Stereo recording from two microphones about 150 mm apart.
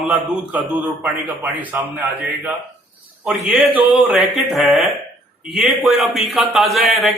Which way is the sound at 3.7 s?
10° right (ahead or behind).